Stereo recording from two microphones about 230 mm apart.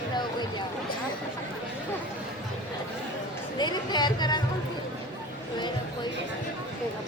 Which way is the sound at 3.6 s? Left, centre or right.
Centre.